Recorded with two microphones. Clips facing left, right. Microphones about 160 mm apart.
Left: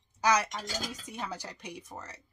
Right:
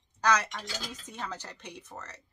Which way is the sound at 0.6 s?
45° left (ahead or behind).